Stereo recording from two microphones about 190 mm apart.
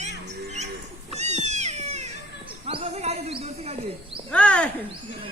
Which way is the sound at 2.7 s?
30° right (ahead or behind).